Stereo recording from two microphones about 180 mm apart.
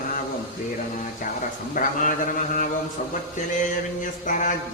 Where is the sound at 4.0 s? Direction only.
45° left (ahead or behind).